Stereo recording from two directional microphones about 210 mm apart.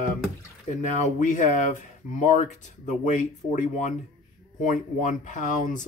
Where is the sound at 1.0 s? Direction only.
35° left (ahead or behind).